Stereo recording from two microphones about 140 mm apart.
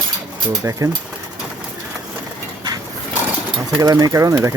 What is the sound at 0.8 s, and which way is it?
Speech, 20° right (ahead or behind).